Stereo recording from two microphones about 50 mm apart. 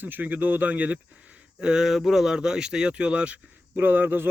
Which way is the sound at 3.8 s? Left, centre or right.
Right.